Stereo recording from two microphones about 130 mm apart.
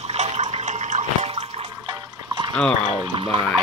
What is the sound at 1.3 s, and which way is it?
Water, 40° right (ahead or behind).